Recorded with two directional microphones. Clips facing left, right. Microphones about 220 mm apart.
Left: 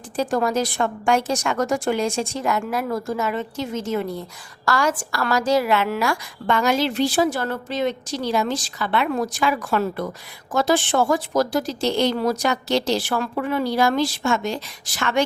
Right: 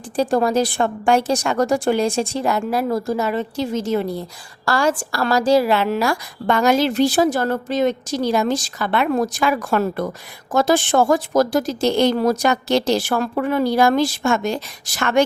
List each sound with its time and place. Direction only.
0.2 s a woman's voice: 30° right (ahead or behind)